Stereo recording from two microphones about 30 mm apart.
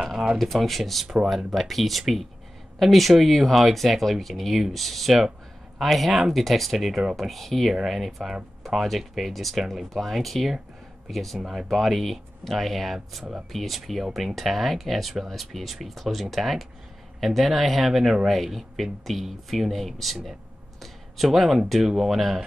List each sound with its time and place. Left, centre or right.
0.0 s shuffling cards: centre
0.4 s speech: centre
1.0 s speech: right
1.5 s speech: centre
11.3 s speech: centre
11.7 s speech: centre
17.9 s speech: centre
18.3 s speech: centre
20.8 s a sound: centre
21.8 s speech: centre